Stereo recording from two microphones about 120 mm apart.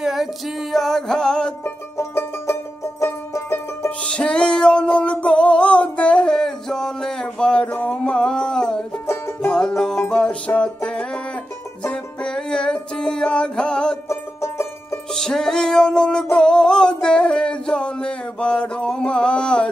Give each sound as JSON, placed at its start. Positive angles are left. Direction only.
{"t": 0.0, "sound": "music", "side_deg": -5}
{"t": 1.6, "sound": "music", "side_deg": 20}
{"t": 4.0, "sound": "music", "side_deg": 5}
{"t": 9.0, "sound": "music", "side_deg": 20}
{"t": 9.4, "sound": "music", "side_deg": 5}
{"t": 14.0, "sound": "music", "side_deg": 20}
{"t": 15.1, "sound": "music", "side_deg": 5}